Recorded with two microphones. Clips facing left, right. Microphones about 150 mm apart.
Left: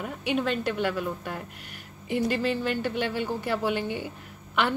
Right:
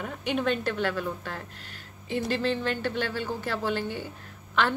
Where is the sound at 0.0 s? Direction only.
5° left (ahead or behind).